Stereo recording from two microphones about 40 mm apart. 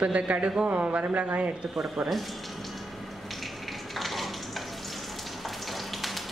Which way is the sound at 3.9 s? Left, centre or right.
Centre.